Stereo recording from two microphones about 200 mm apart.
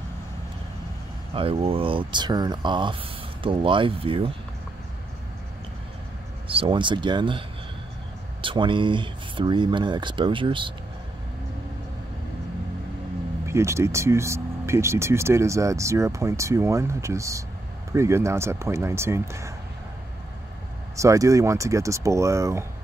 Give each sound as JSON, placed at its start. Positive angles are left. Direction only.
{"t": 1.3, "sound": "speech", "side_deg": -30}
{"t": 6.4, "sound": "speech", "side_deg": -25}
{"t": 13.5, "sound": "speech", "side_deg": -15}
{"t": 20.9, "sound": "speech", "side_deg": -15}